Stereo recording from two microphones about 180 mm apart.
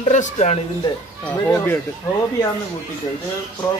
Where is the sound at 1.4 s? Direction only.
15° left (ahead or behind).